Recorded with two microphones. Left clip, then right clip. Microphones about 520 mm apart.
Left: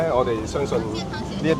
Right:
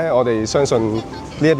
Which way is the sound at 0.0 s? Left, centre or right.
Right.